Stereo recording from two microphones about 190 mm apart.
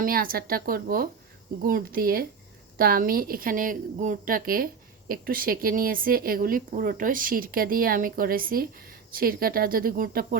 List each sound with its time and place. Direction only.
0.0 s a woman's voice: 50° right (ahead or behind)